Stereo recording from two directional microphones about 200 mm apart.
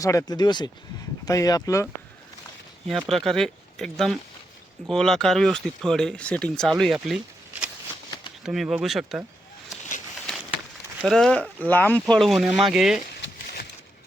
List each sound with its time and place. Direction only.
0.0 s speech: 15° left (ahead or behind)
2.8 s speech: centre (ahead or behind)
8.4 s speech: 5° right (ahead or behind)
11.0 s speech: centre (ahead or behind)